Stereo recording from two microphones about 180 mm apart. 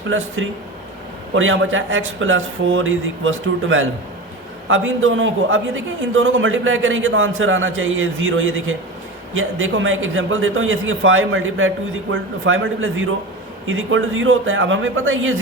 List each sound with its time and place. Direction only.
0.4 s speech: 90° right